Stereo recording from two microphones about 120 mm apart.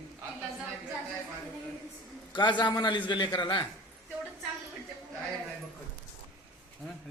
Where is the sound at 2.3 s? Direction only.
40° left (ahead or behind).